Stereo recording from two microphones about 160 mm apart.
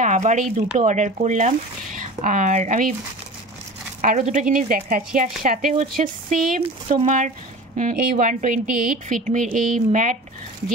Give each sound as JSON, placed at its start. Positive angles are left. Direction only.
{"t": 0.0, "sound": "speech", "side_deg": -50}
{"t": 4.0, "sound": "speech", "side_deg": -55}
{"t": 6.6, "sound": "speech", "side_deg": -45}